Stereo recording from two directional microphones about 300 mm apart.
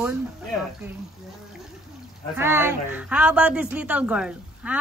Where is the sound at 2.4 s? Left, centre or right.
Centre.